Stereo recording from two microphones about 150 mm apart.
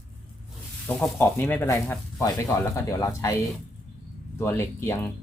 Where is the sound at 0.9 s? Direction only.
10° left (ahead or behind).